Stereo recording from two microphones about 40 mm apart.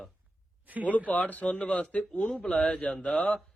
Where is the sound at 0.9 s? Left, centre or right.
Left.